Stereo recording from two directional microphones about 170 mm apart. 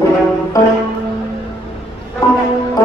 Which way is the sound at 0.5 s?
20° left (ahead or behind).